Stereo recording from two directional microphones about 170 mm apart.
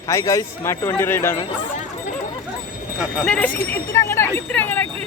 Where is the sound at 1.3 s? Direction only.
30° left (ahead or behind).